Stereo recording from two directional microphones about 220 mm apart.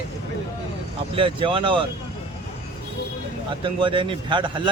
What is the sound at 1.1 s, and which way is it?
Speech, 25° right (ahead or behind).